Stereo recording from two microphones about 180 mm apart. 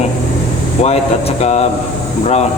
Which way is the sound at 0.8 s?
35° left (ahead or behind).